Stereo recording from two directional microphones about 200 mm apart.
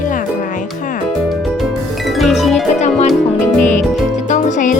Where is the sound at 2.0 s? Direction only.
Centre (ahead or behind).